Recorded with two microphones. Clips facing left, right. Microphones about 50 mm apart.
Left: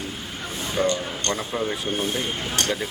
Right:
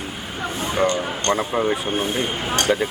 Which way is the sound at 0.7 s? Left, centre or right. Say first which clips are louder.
Right 3 dB; right.